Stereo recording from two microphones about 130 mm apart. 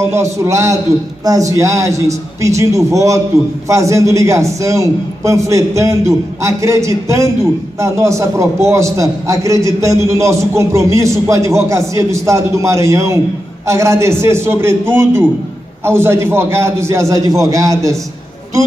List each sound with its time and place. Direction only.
0.0 s a man's voice: 20° right (ahead or behind)